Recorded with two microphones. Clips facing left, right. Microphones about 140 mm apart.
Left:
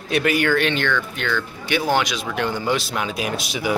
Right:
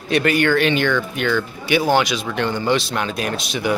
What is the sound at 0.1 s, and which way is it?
Speech, 5° left (ahead or behind).